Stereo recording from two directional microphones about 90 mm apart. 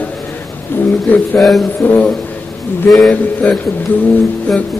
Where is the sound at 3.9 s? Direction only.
20° left (ahead or behind).